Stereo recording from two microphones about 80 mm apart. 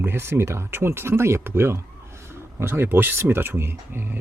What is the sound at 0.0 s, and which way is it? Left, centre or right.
Speech, right.